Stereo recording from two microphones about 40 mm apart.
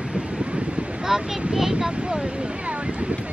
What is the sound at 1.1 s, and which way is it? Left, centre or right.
Speech, centre.